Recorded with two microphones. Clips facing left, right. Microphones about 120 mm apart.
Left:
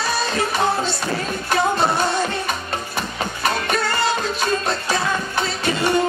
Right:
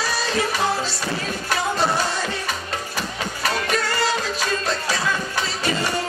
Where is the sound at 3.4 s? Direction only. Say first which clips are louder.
Left 2 dB; 50° left (ahead or behind).